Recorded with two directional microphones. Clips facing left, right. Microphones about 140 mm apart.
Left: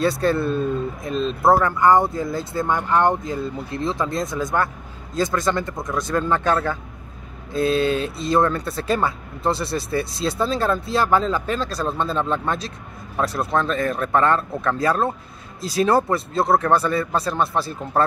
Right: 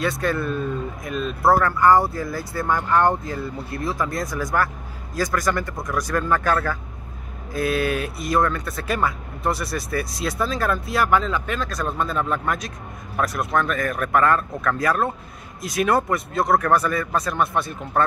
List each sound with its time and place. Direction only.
0.0 s speech: 30° left (ahead or behind)